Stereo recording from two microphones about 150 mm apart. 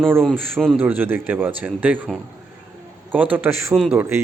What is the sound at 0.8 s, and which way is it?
Speech, 15° right (ahead or behind).